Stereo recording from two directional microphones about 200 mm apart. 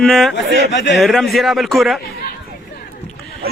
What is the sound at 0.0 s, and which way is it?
Speech, centre (ahead or behind).